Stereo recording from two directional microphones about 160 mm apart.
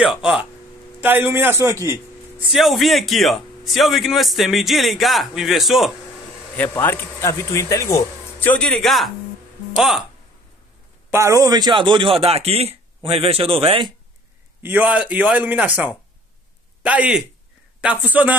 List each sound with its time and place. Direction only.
0.0 s a man's voice: centre (ahead or behind); by 2.0 s 15° right (ahead or behind)
2.5 s a man's voice: centre (ahead or behind)
6.5 s a man's voice: 10° left (ahead or behind)
11.1 s a man's voice: 20° right (ahead or behind)
14.6 s a man's voice: 10° right (ahead or behind)